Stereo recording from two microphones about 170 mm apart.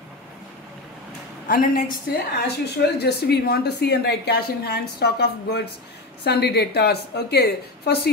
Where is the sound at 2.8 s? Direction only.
75° left (ahead or behind).